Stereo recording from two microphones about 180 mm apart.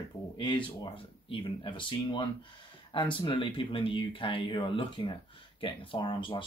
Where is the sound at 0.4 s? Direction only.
30° left (ahead or behind).